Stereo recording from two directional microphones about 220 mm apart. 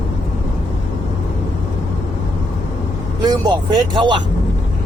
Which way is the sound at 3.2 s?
20° right (ahead or behind).